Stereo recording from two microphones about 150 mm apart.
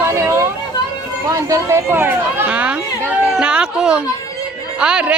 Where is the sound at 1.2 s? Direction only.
20° right (ahead or behind).